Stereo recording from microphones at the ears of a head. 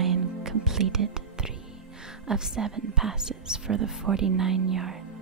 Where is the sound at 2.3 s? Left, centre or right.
Right.